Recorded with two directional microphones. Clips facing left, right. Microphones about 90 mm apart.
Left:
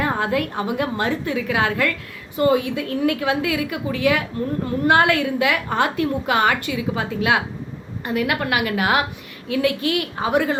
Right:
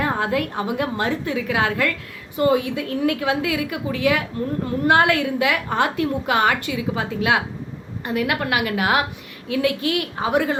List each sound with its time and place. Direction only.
0.0 s a woman's voice: 15° right (ahead or behind)